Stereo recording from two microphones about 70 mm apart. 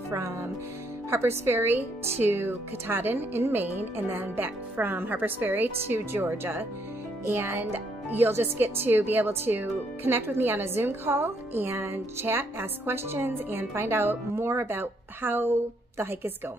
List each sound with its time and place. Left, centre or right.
0.1 s speech: right